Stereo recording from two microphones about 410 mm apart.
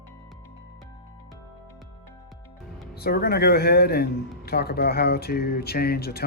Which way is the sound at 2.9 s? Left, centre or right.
Left.